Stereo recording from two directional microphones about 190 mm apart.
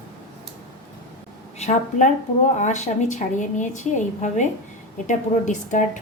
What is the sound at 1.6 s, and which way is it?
A woman's voice, 40° left (ahead or behind).